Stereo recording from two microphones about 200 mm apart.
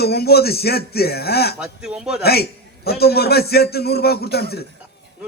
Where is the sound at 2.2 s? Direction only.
50° left (ahead or behind).